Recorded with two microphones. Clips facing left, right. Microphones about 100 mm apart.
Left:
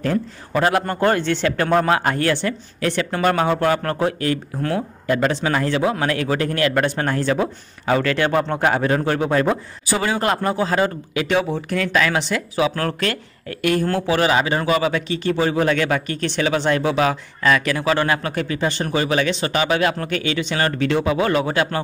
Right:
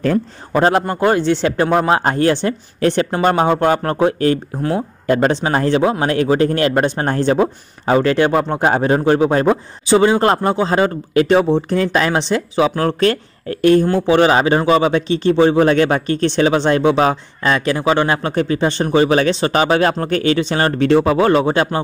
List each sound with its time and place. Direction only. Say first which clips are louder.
0.0 s a man's voice: right 4 dB; 35° right (ahead or behind)
0.8 s a man's voice: right 4 dB; 15° right (ahead or behind)
2.0 s a man's voice: right 5 dB; 30° right (ahead or behind)
5.0 s a man's voice: right 5 dB; 35° right (ahead or behind)